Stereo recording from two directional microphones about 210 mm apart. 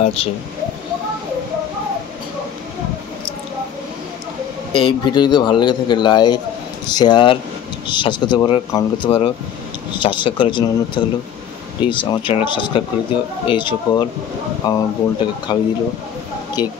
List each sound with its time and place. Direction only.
0.0 s speech: 25° left (ahead or behind)
4.7 s speech: 20° left (ahead or behind)